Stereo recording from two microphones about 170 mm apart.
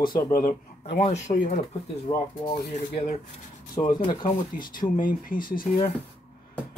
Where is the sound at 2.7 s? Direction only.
40° left (ahead or behind).